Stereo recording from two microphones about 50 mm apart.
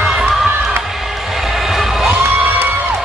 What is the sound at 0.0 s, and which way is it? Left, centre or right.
Crowd, centre.